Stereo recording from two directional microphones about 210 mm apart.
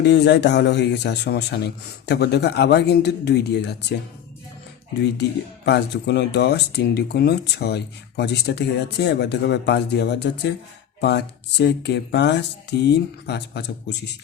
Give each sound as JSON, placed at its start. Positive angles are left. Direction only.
{"t": 0.0, "sound": "speech", "side_deg": 55}
{"t": 5.6, "sound": "speech", "side_deg": 55}